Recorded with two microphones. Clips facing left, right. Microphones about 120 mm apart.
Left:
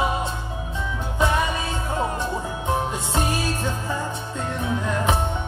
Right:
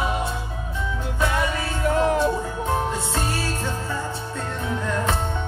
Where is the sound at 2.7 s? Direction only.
15° left (ahead or behind).